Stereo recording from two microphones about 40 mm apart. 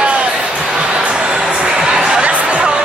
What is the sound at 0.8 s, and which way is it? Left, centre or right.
Music, right.